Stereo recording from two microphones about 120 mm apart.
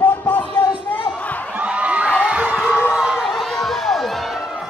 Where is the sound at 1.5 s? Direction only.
10° right (ahead or behind).